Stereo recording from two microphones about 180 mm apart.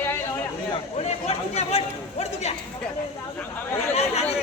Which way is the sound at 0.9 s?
35° left (ahead or behind).